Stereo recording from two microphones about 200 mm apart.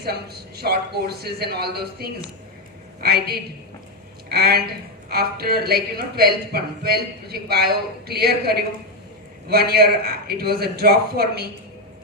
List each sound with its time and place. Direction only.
0.0 s a woman's voice: 50° right (ahead or behind)